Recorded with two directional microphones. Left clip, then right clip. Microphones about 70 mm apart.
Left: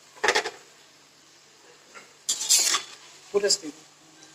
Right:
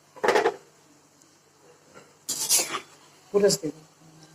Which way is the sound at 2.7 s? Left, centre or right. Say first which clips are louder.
Left 7 dB; right.